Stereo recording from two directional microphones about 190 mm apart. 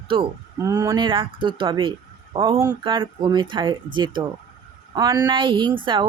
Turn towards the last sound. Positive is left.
turn(degrees=-25)  # may be behind; listen again after turning